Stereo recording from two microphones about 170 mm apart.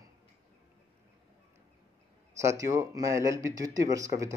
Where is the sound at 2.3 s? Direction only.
20° right (ahead or behind).